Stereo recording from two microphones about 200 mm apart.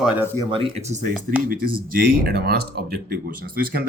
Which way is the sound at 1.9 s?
45° right (ahead or behind).